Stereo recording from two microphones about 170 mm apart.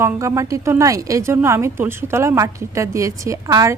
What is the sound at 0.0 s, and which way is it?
A woman's voice, 15° right (ahead or behind).